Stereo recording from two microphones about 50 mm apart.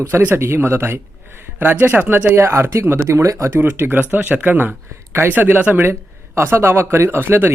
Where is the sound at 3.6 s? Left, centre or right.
Right.